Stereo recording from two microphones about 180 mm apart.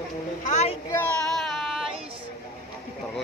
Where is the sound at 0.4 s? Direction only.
40° left (ahead or behind).